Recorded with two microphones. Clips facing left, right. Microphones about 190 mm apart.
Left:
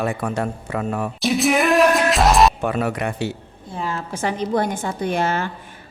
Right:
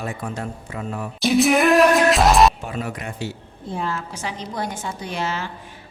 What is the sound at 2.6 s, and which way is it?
Speech, 65° left (ahead or behind).